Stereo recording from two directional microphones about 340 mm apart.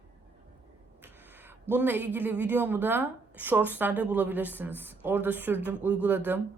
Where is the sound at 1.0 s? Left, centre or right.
Centre.